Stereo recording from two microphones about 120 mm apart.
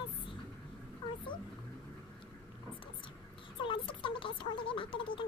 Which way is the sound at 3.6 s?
45° left (ahead or behind).